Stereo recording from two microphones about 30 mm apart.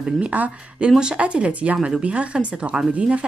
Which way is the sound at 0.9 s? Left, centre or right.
Right.